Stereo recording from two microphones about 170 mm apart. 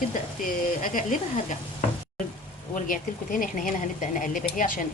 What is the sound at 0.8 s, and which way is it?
Speech, 50° left (ahead or behind).